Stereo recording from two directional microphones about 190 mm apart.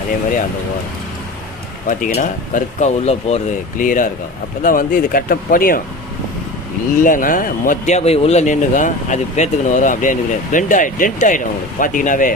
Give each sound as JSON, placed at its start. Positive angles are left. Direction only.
{"t": 1.9, "sound": "speech", "side_deg": 45}
{"t": 7.0, "sound": "speech", "side_deg": 45}